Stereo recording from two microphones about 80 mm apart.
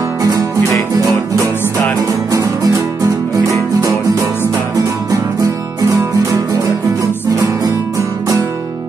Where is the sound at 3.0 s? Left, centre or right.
Right.